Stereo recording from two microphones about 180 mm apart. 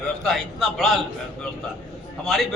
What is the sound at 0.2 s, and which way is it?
Speech, centre (ahead or behind).